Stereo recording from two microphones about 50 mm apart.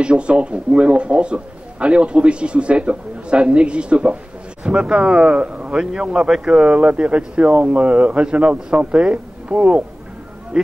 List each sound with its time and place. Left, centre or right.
0.0 s a man's voice: right
5.8 s a man's voice: centre